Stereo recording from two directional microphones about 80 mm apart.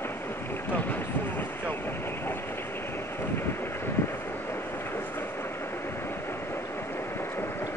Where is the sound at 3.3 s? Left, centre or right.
Left.